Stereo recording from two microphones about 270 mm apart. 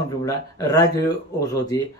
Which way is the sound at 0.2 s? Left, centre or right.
Centre.